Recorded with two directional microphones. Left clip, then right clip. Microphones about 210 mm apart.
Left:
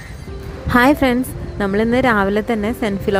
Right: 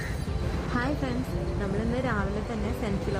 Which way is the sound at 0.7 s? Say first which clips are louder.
Left 18 dB; 50° left (ahead or behind).